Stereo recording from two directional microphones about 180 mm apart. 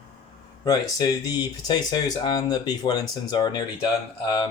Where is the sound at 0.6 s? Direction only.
20° left (ahead or behind).